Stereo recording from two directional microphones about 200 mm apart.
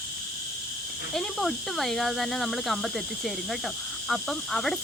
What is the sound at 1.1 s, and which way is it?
Speech, centre (ahead or behind).